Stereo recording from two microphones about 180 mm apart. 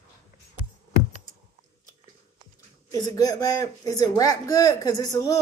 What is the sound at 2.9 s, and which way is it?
Speech, 20° left (ahead or behind).